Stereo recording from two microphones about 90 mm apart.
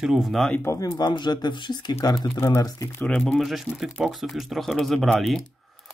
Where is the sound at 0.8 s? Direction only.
55° left (ahead or behind).